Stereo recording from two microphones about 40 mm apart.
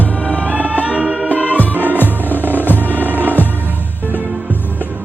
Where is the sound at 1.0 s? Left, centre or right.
Right.